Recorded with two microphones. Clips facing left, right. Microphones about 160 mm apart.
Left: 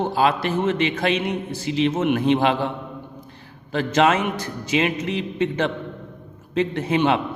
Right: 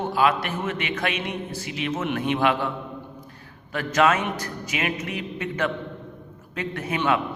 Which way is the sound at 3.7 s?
25° left (ahead or behind).